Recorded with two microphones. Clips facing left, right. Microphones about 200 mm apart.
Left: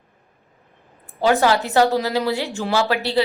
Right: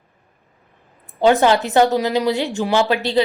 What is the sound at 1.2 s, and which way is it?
A woman's voice, 20° right (ahead or behind).